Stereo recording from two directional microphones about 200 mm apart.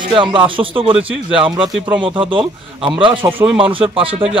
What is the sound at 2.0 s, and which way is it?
Speech, 25° right (ahead or behind).